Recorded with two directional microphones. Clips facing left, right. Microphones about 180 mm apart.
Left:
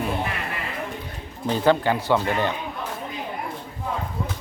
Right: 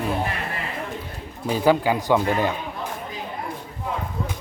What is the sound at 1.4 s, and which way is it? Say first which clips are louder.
Speech: right 1 dB; 10° right (ahead or behind).